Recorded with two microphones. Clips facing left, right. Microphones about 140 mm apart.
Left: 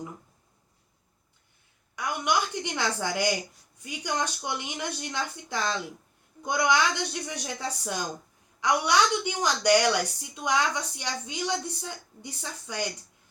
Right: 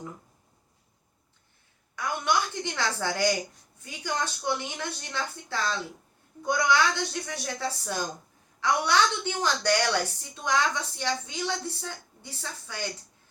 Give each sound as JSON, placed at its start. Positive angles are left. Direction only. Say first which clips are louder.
{"t": 2.0, "sound": "a woman's voice", "louder": "even", "side_deg": 15}